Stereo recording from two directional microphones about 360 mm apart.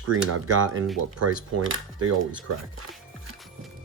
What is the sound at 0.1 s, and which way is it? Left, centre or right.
Speech, right.